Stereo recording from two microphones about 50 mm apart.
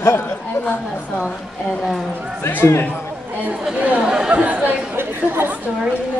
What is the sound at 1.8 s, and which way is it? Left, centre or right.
Speech, centre.